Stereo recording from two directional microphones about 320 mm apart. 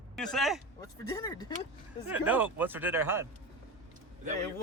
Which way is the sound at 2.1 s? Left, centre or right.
Centre.